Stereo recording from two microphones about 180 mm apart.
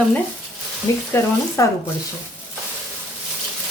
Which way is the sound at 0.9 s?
15° left (ahead or behind).